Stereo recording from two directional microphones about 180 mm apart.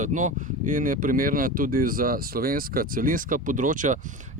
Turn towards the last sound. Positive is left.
turn(degrees=-45)  # may be behind; listen again after turning